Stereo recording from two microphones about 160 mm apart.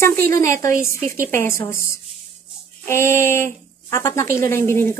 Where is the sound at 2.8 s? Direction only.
15° left (ahead or behind).